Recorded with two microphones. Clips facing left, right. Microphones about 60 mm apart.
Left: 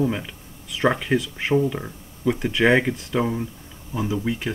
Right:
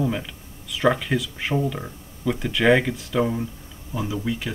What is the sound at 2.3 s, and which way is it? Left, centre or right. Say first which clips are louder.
Speech: even; centre.